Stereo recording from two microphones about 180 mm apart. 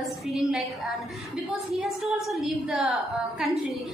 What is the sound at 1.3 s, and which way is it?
A woman's voice, centre (ahead or behind).